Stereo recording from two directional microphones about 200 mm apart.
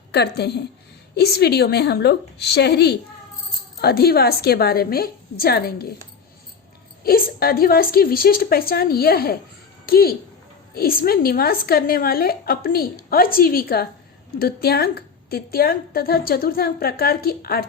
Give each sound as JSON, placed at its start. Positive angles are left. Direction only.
{"t": 0.1, "sound": "a woman's voice", "side_deg": 55}
{"t": 7.0, "sound": "a woman's voice", "side_deg": 50}